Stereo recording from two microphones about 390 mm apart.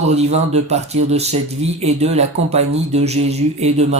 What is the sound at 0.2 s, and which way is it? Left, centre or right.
Speech, centre.